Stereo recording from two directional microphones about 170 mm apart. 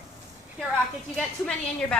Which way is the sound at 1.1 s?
5° left (ahead or behind).